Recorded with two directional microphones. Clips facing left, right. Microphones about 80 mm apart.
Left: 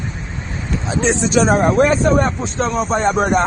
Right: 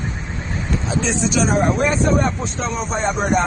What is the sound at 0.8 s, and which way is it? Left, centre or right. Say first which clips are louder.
Speech: left 4 dB; left.